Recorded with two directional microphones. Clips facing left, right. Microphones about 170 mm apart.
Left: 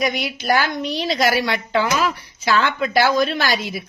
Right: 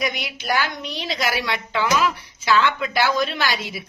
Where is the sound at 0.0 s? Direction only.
40° left (ahead or behind).